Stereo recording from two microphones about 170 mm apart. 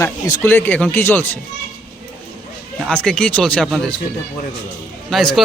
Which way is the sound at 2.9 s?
5° left (ahead or behind).